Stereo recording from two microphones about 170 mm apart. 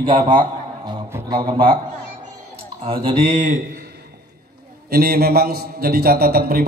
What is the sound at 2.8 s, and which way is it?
Speech, 35° right (ahead or behind).